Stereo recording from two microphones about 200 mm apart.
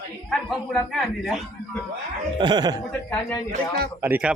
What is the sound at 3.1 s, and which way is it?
Speech, 10° left (ahead or behind).